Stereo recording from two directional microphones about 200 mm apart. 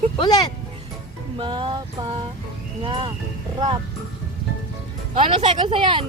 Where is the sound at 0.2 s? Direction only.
20° left (ahead or behind).